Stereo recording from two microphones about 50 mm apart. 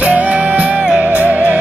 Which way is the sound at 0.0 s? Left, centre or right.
Right.